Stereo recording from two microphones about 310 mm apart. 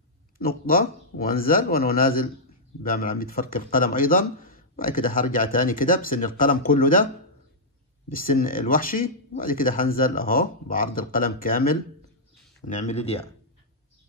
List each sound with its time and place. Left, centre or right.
0.4 s speech: left
8.1 s speech: left